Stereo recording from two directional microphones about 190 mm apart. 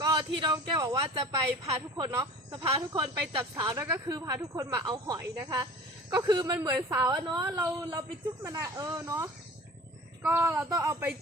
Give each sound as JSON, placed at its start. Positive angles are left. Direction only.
{"t": 0.0, "sound": "a man's voice", "side_deg": -25}